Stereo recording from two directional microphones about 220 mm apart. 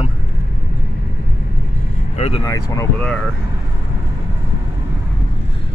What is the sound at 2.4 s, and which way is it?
Speech, 15° left (ahead or behind).